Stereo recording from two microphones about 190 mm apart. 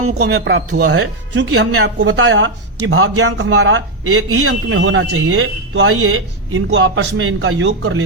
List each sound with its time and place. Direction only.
0.0 s speech: 60° right (ahead or behind); by 8.0 s 80° right